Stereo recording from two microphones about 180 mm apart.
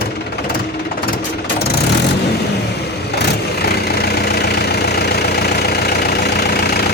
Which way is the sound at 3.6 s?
65° left (ahead or behind).